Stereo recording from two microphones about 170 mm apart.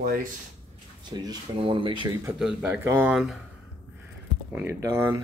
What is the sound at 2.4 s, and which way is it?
Speech, 5° right (ahead or behind).